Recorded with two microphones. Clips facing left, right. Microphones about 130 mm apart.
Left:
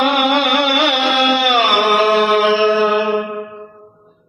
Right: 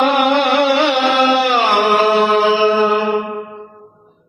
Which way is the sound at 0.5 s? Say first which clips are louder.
Right 2 dB; 30° right (ahead or behind).